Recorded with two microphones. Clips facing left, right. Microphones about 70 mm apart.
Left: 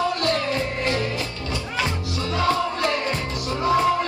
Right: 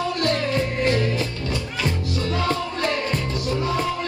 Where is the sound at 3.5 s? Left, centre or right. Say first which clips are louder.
Left 5 dB; centre.